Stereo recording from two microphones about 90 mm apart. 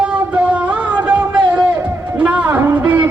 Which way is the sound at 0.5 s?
15° right (ahead or behind).